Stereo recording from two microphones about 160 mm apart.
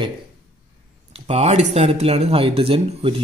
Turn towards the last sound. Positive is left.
turn(degrees=-35)  # may be behind; listen again after turning